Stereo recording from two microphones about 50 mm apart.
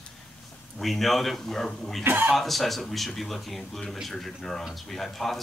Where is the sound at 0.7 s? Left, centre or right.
Centre.